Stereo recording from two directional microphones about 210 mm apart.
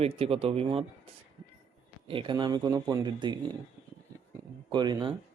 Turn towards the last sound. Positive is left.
turn(degrees=-20)  # may be behind; listen again after turning